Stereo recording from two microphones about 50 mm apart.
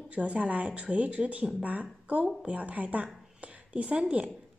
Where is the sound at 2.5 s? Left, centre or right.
Right.